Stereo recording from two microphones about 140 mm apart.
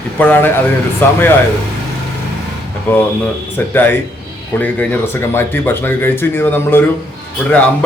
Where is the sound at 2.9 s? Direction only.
15° left (ahead or behind).